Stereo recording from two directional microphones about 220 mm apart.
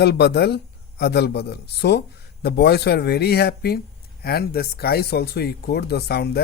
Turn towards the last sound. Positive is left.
turn(degrees=45)  # may be behind; listen again after turning